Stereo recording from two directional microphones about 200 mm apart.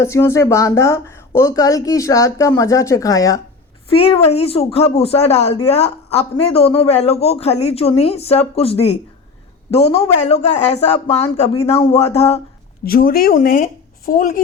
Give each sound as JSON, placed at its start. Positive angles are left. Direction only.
{"t": 0.0, "sound": "a woman's voice", "side_deg": 15}
{"t": 3.9, "sound": "speech", "side_deg": 30}
{"t": 12.8, "sound": "speech", "side_deg": 45}